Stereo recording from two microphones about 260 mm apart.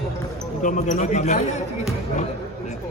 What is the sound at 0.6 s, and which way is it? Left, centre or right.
Speech, left.